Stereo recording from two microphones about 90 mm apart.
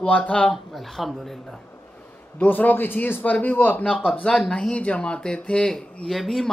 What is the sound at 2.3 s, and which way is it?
Speech, 20° left (ahead or behind).